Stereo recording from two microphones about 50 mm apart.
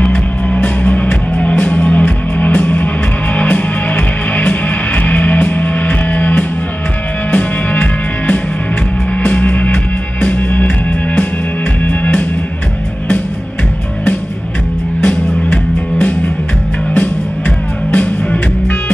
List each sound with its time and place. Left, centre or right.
0.0 s music: left
11.8 s music: left
15.0 s music: left
17.9 s music: left